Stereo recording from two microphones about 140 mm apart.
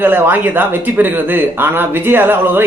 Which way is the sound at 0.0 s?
15° right (ahead or behind).